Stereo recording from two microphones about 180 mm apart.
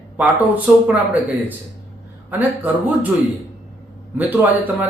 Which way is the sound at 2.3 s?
10° right (ahead or behind).